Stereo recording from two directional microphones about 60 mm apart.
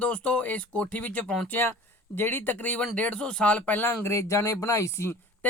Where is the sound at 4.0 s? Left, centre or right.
Left.